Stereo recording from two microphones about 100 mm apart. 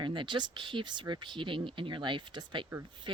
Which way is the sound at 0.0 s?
55° right (ahead or behind).